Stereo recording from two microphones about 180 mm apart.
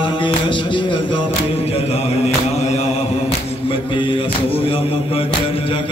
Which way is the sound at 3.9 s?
30° left (ahead or behind).